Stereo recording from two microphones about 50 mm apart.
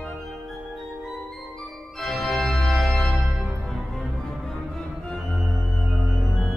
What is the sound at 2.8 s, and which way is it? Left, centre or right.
Music, centre.